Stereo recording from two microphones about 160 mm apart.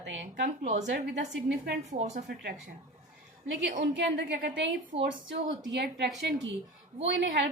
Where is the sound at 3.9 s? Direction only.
90° right.